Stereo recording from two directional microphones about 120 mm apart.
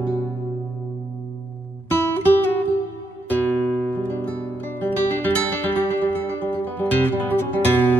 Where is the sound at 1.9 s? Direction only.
20° left (ahead or behind).